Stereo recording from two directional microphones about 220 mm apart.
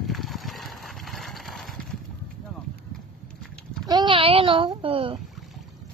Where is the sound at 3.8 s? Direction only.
20° right (ahead or behind).